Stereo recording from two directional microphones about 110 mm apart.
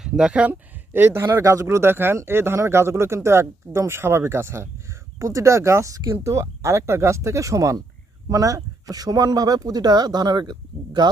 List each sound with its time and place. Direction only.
0.0 s speech: 5° right (ahead or behind)
0.9 s speech: 20° right (ahead or behind); by 11.1 s 40° right (ahead or behind)